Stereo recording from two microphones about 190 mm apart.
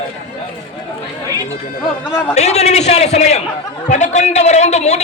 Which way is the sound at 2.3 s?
35° left (ahead or behind).